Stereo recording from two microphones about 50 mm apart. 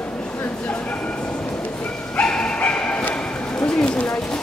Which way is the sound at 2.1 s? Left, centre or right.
Centre.